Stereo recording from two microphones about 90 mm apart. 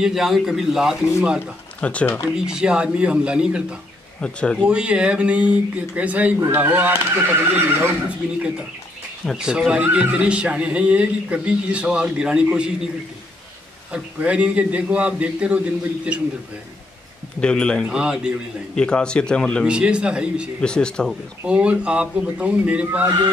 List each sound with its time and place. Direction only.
0.0 s speech: 5° right (ahead or behind)
1.8 s speech: 15° left (ahead or behind)
2.3 s speech: 10° right (ahead or behind)
4.2 s speech: 10° left (ahead or behind)
4.6 s speech: 10° right (ahead or behind)
9.4 s speech: 10° right (ahead or behind)
13.9 s speech: 15° right (ahead or behind)
17.4 s speech: 10° left (ahead or behind)
17.8 s speech: 10° right (ahead or behind)
18.8 s speech: 10° left (ahead or behind)
19.6 s speech: 10° right (ahead or behind)
20.6 s speech: 10° left (ahead or behind)
21.5 s speech: 15° right (ahead or behind)
22.8 s speech: 25° right (ahead or behind)